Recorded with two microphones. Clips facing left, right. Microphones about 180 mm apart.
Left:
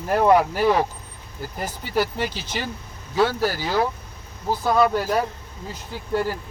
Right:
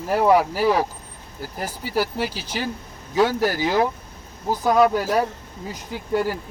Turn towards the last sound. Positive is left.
turn(degrees=-15)  # may be behind; listen again after turning